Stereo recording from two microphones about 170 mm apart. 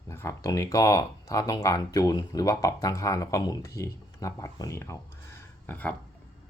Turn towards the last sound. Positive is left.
turn(degrees=10)  # may be behind; listen again after turning